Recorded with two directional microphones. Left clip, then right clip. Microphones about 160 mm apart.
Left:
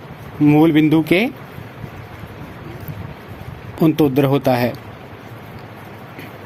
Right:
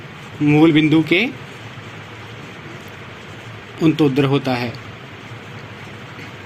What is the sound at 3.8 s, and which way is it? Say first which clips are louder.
Speech: left 1 dB; 80° left.